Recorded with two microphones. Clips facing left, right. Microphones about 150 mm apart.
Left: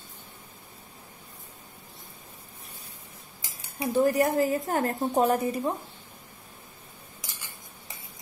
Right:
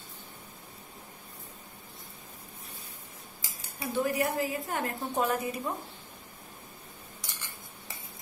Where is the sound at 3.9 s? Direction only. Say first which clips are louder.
Left 6 dB; 40° left (ahead or behind).